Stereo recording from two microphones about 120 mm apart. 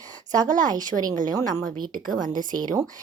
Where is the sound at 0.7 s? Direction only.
35° right (ahead or behind).